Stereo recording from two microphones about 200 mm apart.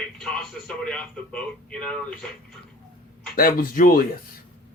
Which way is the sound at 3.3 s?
45° left (ahead or behind).